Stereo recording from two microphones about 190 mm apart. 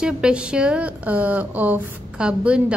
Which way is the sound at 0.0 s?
5° right (ahead or behind).